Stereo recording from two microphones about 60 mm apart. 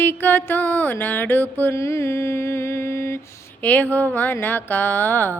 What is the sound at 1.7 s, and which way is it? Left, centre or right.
Mantra, left.